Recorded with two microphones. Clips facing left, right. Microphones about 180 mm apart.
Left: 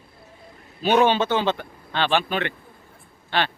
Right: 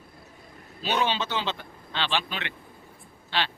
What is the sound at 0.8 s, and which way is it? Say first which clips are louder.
Speech: left 9 dB; 55° left (ahead or behind).